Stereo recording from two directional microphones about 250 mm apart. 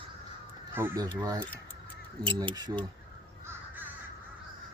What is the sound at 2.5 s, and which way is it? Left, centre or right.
Speech, centre.